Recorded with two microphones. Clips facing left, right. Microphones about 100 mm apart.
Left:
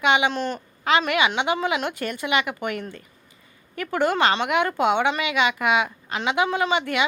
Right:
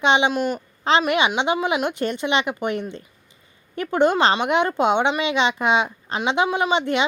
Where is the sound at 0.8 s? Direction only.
25° right (ahead or behind).